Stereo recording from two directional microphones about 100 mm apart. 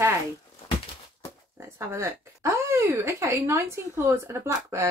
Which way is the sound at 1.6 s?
25° right (ahead or behind).